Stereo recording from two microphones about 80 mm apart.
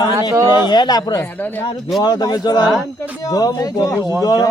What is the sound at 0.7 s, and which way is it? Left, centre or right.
Speech, left.